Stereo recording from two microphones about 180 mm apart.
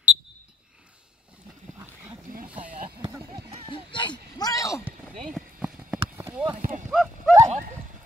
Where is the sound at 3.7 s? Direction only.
25° left (ahead or behind).